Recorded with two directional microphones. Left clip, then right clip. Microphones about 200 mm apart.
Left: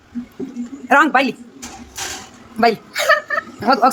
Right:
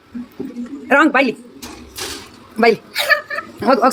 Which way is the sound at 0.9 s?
5° right (ahead or behind).